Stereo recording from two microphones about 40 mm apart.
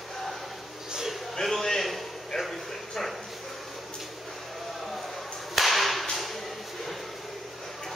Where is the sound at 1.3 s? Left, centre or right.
Centre.